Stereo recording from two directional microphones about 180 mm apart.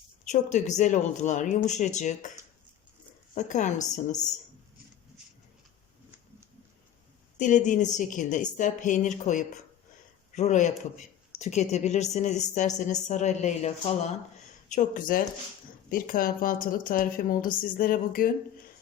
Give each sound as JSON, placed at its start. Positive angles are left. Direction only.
{"t": 0.3, "sound": "a man's voice", "side_deg": 40}
{"t": 3.3, "sound": "a man's voice", "side_deg": 40}
{"t": 7.3, "sound": "a woman's voice", "side_deg": 45}
{"t": 14.7, "sound": "a woman's voice", "side_deg": 45}